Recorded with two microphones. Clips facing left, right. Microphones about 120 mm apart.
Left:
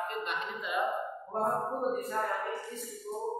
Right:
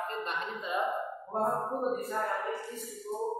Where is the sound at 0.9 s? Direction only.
Centre (ahead or behind).